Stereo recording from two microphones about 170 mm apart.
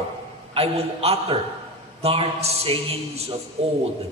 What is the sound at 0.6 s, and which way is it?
A man's voice, 35° right (ahead or behind).